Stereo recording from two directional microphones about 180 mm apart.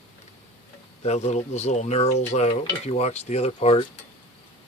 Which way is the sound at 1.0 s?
35° left (ahead or behind).